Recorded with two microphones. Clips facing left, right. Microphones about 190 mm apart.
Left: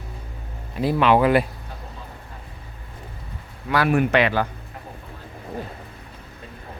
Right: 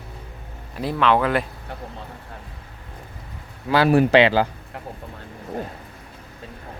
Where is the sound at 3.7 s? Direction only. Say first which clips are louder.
Right 4 dB; 30° right (ahead or behind).